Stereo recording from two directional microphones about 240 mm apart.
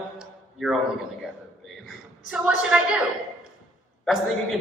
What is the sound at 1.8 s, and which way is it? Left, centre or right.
A woman's voice, centre.